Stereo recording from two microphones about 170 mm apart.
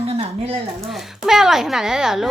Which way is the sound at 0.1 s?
35° right (ahead or behind).